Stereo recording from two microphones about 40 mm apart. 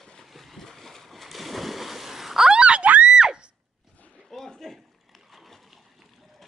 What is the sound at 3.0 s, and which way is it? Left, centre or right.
Screaming, right.